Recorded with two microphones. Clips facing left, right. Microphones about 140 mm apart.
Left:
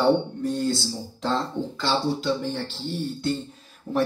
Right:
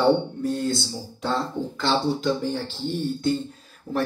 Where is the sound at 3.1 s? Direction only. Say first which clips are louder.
Right 3 dB; centre (ahead or behind).